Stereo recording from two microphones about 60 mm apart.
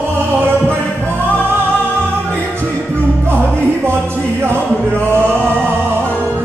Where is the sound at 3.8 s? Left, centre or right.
Right.